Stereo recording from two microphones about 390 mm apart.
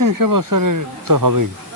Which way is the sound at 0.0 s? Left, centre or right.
Right.